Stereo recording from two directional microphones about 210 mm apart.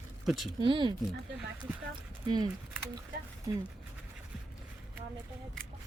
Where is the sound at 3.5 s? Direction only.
20° right (ahead or behind).